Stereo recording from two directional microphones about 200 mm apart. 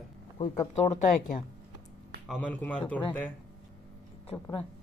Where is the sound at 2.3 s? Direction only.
5° left (ahead or behind).